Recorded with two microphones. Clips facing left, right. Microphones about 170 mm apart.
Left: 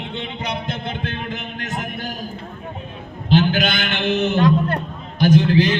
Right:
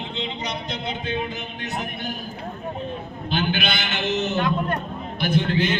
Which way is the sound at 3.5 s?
45° left (ahead or behind).